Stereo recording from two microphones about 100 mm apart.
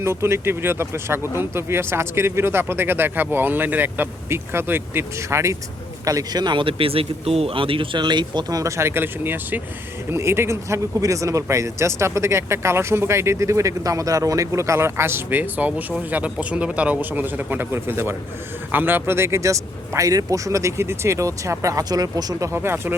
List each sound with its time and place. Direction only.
0.0 s speech: 25° right (ahead or behind)
6.1 s a man's voice: 40° right (ahead or behind)
22.5 s speech: 25° right (ahead or behind)